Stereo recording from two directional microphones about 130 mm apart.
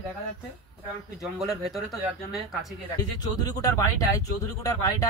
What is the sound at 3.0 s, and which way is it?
Speech, 30° left (ahead or behind).